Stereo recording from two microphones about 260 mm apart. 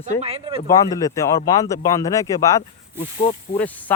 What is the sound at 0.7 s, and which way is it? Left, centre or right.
Speech, centre.